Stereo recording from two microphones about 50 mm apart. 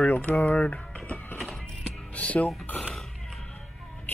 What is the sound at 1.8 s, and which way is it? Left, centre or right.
Music, left.